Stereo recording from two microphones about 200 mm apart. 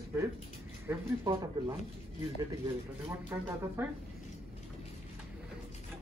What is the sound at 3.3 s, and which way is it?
Speech, 10° right (ahead or behind).